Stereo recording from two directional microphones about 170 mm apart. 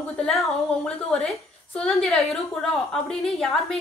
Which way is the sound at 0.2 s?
5° left (ahead or behind).